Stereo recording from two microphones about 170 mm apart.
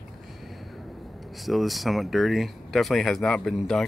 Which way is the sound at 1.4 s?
Centre (ahead or behind).